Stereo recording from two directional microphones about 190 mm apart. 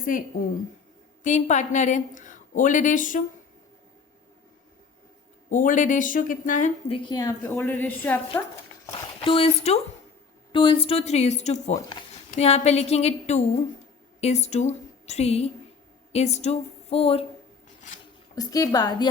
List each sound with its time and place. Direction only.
0.0 s a woman's voice: 45° left (ahead or behind)
5.5 s a woman's voice: 45° left (ahead or behind)
6.9 s a woman's voice: 25° left (ahead or behind)
8.9 s a woman's voice: 25° left (ahead or behind)
17.7 s squish: 40° left (ahead or behind)
18.3 s a woman's voice: 20° left (ahead or behind)